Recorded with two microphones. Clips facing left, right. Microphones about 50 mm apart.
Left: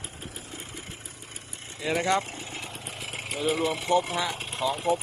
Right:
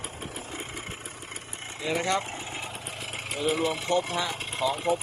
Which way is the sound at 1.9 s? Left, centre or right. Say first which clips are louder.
Left 2 dB; centre.